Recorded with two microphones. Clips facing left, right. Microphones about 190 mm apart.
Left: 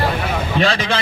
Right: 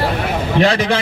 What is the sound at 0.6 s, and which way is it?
Vehicle, 20° right (ahead or behind).